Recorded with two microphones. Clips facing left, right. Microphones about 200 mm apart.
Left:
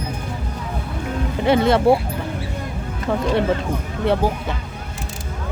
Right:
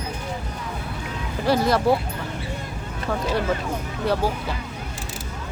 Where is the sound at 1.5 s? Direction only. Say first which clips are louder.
Left 4 dB; 25° left (ahead or behind).